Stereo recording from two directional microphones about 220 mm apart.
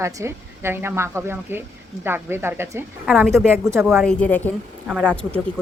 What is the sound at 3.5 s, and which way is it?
Speech, 10° right (ahead or behind).